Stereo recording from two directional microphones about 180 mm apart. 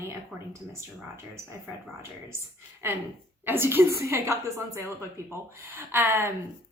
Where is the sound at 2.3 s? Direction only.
15° right (ahead or behind).